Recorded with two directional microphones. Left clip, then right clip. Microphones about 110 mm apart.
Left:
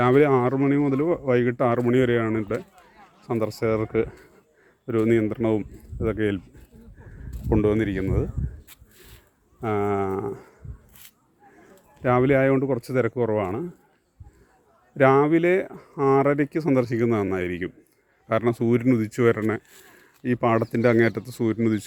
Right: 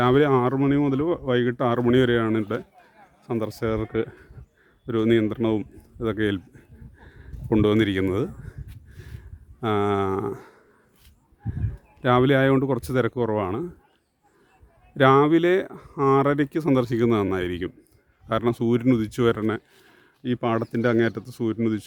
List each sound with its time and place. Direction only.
0.1 s speech: 25° right (ahead or behind)
0.5 s speech: 40° right (ahead or behind)
0.9 s speech: 25° right (ahead or behind)
2.0 s speech: 40° right (ahead or behind)
3.4 s speech: 15° right (ahead or behind)
4.9 s speech: 30° right (ahead or behind)
5.4 s speech: 40° right (ahead or behind)
7.5 s speech: 50° right (ahead or behind)
9.6 s speech: 50° right (ahead or behind)
12.0 s speech: 40° right (ahead or behind)
14.9 s speech: 35° right (ahead or behind)
18.3 s speech: 15° right (ahead or behind); by 21.6 s centre (ahead or behind)